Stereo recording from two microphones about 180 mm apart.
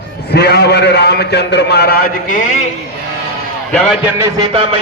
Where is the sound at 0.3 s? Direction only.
65° left (ahead or behind).